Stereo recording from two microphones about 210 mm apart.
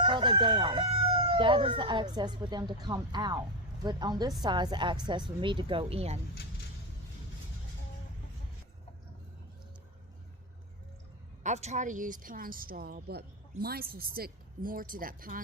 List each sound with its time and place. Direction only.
0.0 s crowing: 25° right (ahead or behind)
1.3 s speech: 20° right (ahead or behind)
11.4 s speech: 30° right (ahead or behind)